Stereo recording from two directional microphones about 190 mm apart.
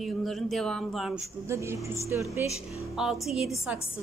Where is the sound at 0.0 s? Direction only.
Centre (ahead or behind).